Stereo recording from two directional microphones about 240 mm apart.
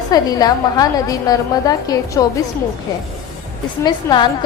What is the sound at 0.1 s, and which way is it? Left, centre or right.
A woman's voice, centre.